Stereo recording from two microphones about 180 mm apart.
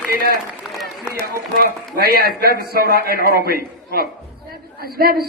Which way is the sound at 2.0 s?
55° right (ahead or behind).